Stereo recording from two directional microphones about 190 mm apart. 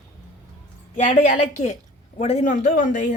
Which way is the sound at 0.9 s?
40° left (ahead or behind).